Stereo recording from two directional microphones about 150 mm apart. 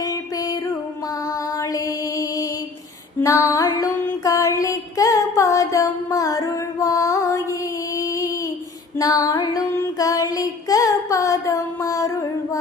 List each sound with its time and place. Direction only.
0.0 s music: 25° left (ahead or behind)
3.2 s mantra: 20° left (ahead or behind)
9.0 s child singing: 25° left (ahead or behind)